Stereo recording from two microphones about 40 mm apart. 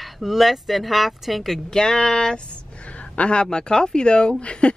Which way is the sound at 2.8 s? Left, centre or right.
Left.